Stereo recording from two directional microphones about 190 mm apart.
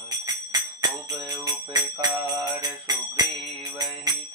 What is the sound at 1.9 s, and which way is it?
Jingle bell, 20° right (ahead or behind).